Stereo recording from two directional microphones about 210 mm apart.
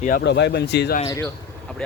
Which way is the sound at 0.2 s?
55° left (ahead or behind).